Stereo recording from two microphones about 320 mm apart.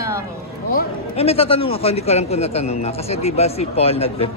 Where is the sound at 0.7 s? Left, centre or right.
Centre.